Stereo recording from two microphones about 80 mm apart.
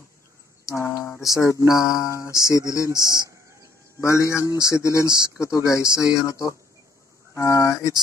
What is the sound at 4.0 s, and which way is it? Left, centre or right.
Speech, left.